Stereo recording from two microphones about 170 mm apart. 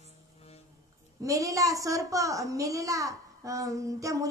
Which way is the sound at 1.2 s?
20° right (ahead or behind).